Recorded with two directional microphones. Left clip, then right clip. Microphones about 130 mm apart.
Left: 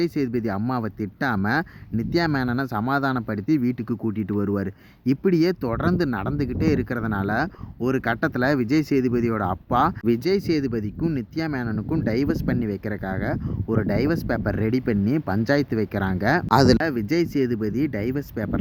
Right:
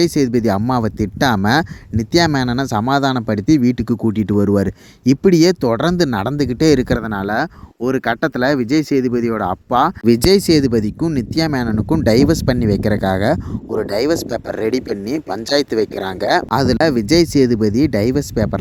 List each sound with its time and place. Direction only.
0.0 s speech: 40° right (ahead or behind)
16.5 s speech: centre (ahead or behind)
16.7 s speech: 45° right (ahead or behind)